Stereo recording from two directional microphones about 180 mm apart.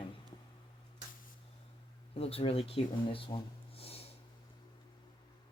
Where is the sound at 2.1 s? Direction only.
35° left (ahead or behind).